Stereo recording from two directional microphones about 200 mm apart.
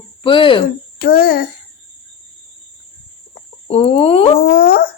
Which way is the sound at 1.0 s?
50° left (ahead or behind).